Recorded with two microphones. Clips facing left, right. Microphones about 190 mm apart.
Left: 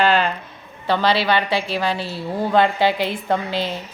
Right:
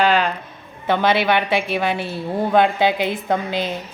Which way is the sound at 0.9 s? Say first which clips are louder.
Right 1 dB; 20° right (ahead or behind).